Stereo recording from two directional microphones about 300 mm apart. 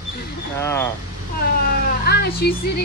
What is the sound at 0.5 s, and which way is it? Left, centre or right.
Speech, centre.